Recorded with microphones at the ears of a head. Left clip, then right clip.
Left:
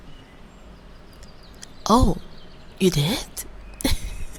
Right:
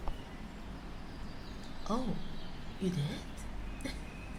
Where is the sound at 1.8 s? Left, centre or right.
Left.